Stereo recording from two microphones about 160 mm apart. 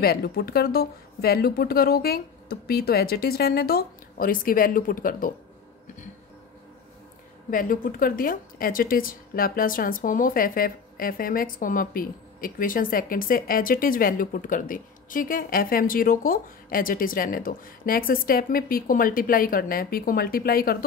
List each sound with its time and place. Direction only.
0.0 s speech: 75° left (ahead or behind); by 5.3 s 60° left (ahead or behind)
7.5 s a woman's voice: 60° left (ahead or behind)